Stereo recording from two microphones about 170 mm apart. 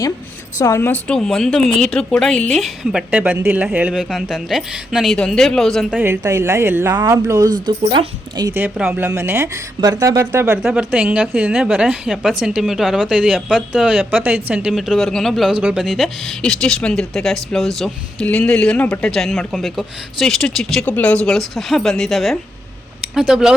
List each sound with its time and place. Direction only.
0.6 s speech: 15° left (ahead or behind)
6.0 s speech: 15° right (ahead or behind)
8.5 s speech: 10° right (ahead or behind)
10.6 s speech: 5° right (ahead or behind)